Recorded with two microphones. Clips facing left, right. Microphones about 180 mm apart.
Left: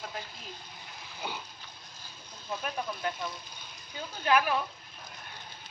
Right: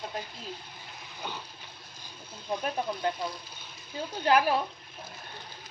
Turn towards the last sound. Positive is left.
turn(degrees=-30)  # may be behind; listen again after turning